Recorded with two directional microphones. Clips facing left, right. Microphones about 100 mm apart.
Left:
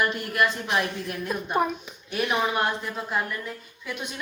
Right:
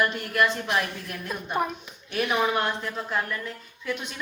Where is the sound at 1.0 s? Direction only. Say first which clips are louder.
Left 4 dB; 15° left (ahead or behind).